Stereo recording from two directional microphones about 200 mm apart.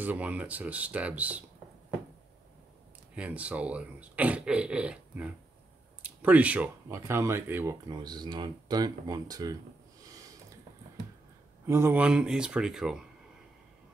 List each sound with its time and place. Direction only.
0.0 s speech: 10° right (ahead or behind)
3.2 s speech: 5° right (ahead or behind)
11.6 s speech: 15° right (ahead or behind)